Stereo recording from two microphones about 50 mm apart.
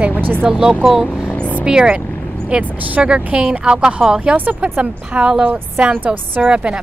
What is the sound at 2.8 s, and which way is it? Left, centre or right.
A woman's voice, right.